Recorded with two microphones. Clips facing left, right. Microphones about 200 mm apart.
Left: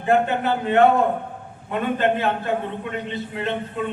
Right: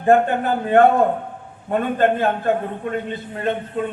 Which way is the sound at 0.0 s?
50° right (ahead or behind).